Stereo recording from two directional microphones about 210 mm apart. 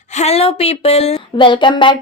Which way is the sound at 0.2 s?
30° left (ahead or behind).